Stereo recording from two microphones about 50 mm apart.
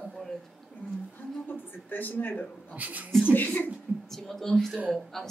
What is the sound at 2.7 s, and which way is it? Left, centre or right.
Speech, right.